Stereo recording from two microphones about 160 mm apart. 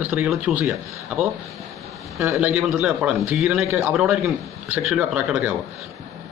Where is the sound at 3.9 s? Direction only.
Centre (ahead or behind).